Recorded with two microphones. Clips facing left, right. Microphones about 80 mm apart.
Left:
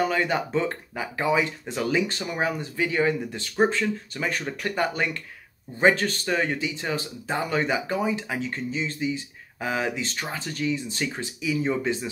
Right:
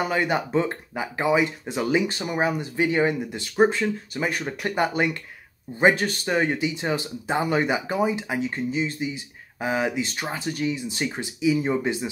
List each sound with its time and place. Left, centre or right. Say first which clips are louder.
0.0 s speech: even; centre
3.3 s speech: right 3 dB; centre